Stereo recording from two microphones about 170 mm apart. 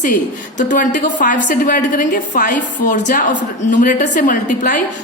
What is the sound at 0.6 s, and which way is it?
A woman's voice, 50° left (ahead or behind).